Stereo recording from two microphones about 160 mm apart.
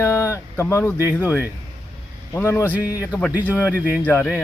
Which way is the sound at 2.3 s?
15° left (ahead or behind).